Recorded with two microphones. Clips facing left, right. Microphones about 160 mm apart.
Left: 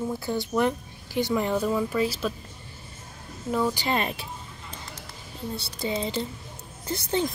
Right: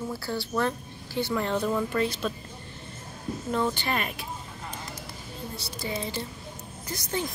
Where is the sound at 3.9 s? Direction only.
30° left (ahead or behind).